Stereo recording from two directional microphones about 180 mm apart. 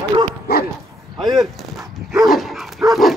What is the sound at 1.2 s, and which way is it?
Speech, centre (ahead or behind).